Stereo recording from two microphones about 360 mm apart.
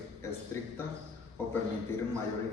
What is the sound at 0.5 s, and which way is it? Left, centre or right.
Speech, centre.